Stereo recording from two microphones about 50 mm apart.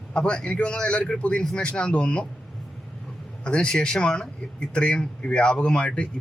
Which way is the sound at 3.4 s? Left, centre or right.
Centre.